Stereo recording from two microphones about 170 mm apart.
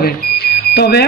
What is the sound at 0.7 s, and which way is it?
Speech, 70° left (ahead or behind).